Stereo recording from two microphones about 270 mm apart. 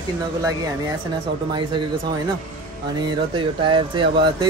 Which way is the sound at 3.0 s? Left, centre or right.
Centre.